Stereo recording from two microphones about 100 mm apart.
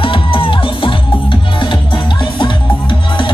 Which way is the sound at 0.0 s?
60° left (ahead or behind).